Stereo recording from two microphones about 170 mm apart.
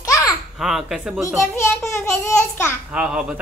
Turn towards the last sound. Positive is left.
turn(degrees=-5)  # may be behind; listen again after turning